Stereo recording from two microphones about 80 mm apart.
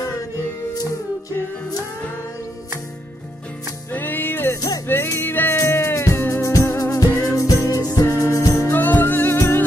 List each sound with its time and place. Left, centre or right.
3.9 s music: left
4.6 s music: left
4.8 s music: left